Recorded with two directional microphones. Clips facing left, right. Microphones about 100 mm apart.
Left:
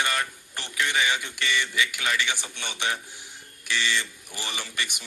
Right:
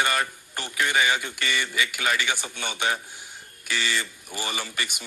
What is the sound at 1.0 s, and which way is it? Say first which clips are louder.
A man's voice: right 2 dB; 50° right (ahead or behind).